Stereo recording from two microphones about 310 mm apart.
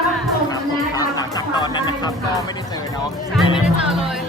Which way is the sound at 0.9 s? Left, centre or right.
Centre.